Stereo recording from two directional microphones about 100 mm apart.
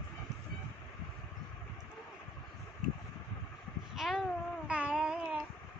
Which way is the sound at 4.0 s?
5° right (ahead or behind).